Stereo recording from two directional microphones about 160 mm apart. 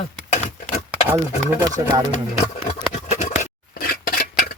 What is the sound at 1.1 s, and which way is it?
Speech, 15° right (ahead or behind).